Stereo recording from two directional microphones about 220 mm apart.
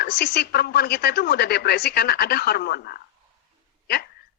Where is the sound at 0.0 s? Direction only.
45° left (ahead or behind).